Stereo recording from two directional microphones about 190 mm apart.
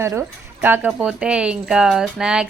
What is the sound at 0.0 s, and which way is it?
Speech, 15° right (ahead or behind).